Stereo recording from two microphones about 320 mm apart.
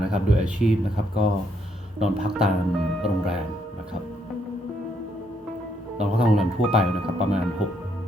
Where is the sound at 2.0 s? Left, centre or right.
Centre.